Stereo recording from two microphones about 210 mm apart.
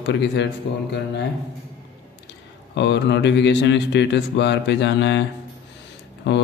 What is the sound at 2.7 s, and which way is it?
Speech, 55° left (ahead or behind).